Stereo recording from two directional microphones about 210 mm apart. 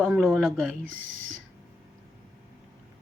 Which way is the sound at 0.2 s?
Centre (ahead or behind).